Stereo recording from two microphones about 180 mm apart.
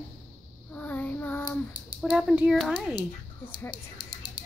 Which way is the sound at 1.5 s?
25° left (ahead or behind).